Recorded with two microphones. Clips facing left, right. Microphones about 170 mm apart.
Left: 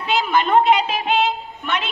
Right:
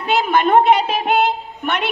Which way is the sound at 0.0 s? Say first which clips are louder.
Right 3 dB; 50° right (ahead or behind).